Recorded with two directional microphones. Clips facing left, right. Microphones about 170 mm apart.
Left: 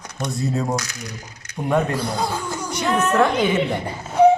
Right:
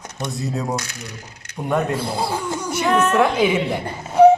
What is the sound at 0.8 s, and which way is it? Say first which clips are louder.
Speech: left 1 dB; 30° right (ahead or behind).